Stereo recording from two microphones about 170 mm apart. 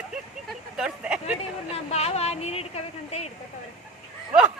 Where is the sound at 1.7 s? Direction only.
40° left (ahead or behind).